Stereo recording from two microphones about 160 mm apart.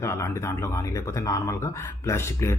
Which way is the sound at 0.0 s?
20° left (ahead or behind).